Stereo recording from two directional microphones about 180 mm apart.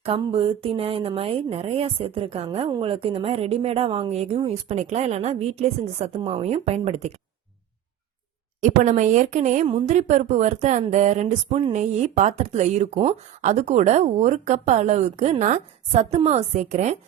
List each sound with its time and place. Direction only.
0.0 s speech: 35° right (ahead or behind)
8.8 s a woman's voice: 45° right (ahead or behind)